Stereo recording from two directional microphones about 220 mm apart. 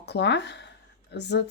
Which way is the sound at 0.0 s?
50° left (ahead or behind).